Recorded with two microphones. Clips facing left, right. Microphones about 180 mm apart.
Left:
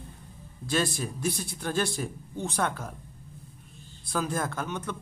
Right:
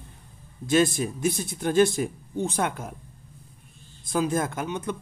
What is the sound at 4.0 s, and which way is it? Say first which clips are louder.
Speech: right 5 dB; 20° right (ahead or behind).